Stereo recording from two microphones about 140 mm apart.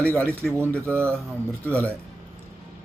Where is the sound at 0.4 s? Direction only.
Centre (ahead or behind).